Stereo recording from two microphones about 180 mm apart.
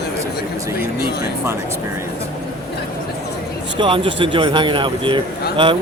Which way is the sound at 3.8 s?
30° right (ahead or behind).